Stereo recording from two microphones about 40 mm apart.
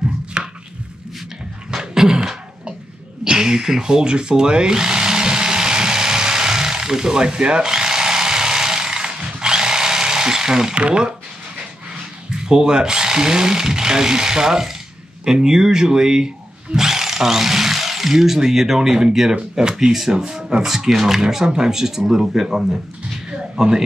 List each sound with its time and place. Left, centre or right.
0.4 s chopping: right
1.7 s a sound: centre
3.3 s tools: centre
10.7 s speech: right
12.3 s speech: centre